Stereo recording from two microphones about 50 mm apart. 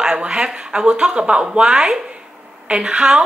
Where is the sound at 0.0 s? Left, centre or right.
Centre.